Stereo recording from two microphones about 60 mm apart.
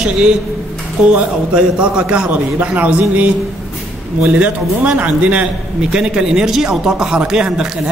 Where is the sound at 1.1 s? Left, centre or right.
Centre.